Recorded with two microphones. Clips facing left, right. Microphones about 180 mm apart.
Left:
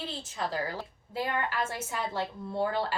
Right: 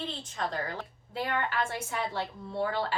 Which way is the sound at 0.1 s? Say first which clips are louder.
Left 1 dB; 5° left (ahead or behind).